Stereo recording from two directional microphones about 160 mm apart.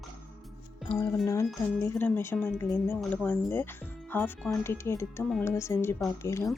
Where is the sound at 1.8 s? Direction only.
15° left (ahead or behind).